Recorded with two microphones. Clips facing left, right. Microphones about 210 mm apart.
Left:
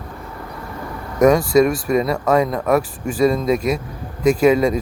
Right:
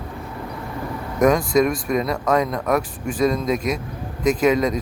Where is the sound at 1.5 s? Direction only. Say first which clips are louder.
Left 4 dB; 5° left (ahead or behind).